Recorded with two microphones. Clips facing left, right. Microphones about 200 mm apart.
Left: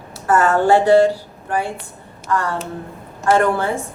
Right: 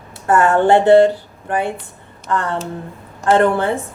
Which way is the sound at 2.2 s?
20° right (ahead or behind).